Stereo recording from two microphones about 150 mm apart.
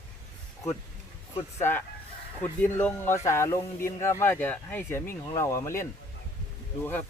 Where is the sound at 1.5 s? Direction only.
15° left (ahead or behind).